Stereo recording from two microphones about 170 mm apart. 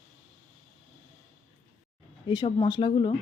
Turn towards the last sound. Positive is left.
turn(degrees=25)  # may be behind; listen again after turning